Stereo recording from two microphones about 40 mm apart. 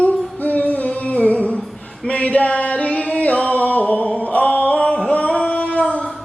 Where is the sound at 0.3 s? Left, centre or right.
Left.